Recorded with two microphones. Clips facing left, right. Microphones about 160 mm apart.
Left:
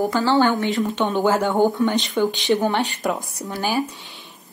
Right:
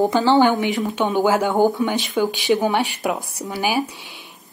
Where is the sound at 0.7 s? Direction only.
5° right (ahead or behind).